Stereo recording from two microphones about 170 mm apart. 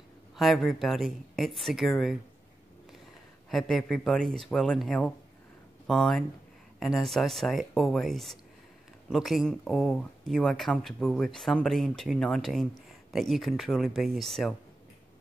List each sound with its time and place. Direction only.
0.4 s speech: centre (ahead or behind)
3.4 s speech: centre (ahead or behind)